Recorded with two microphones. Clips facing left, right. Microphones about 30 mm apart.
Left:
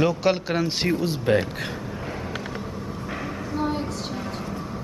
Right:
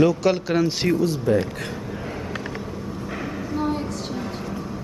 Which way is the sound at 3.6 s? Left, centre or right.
Centre.